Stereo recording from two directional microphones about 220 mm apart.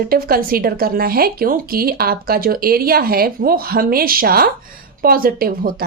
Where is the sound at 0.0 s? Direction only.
40° right (ahead or behind).